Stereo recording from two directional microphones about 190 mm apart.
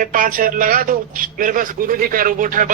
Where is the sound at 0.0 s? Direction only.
45° right (ahead or behind).